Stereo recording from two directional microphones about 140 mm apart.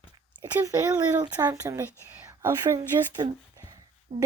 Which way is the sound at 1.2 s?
25° right (ahead or behind).